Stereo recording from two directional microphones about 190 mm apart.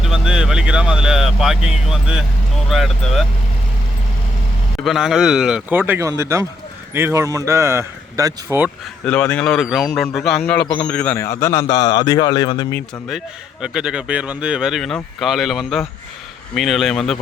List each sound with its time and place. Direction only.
0.0 s speech: 5° right (ahead or behind)
4.8 s speech: centre (ahead or behind)
9.0 s a man's voice: 5° left (ahead or behind)
13.1 s speech: centre (ahead or behind)